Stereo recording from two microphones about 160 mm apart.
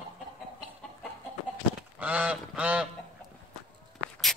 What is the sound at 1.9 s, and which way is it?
Goose, 10° right (ahead or behind).